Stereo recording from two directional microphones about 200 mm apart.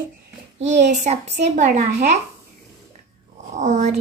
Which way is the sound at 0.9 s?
35° right (ahead or behind).